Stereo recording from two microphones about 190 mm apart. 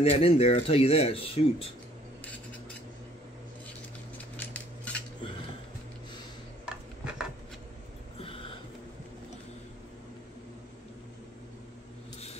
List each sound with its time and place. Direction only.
0.0 s speech: 30° left (ahead or behind)
4.4 s scissors: 10° left (ahead or behind)
6.6 s dishes: 5° right (ahead or behind)
8.2 s a sound: 30° left (ahead or behind)